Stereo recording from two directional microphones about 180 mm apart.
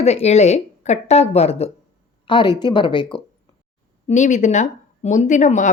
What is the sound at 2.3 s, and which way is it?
Speech, 25° left (ahead or behind).